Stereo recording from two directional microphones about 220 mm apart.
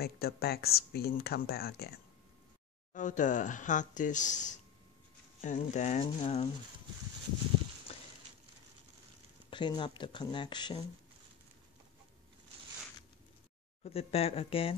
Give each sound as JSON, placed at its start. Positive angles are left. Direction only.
{"t": 0.0, "sound": "speech", "side_deg": 45}
{"t": 2.9, "sound": "speech", "side_deg": 35}
{"t": 7.9, "sound": "a sound", "side_deg": 25}
{"t": 9.5, "sound": "speech", "side_deg": 20}
{"t": 13.8, "sound": "speech", "side_deg": 25}